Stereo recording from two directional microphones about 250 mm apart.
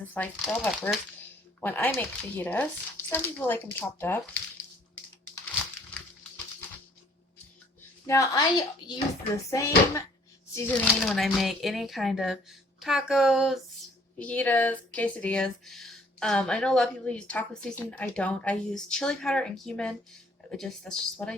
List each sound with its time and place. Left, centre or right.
0.1 s speech: centre
8.0 s speech: centre